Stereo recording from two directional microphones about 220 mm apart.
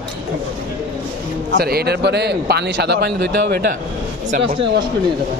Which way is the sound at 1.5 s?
45° right (ahead or behind).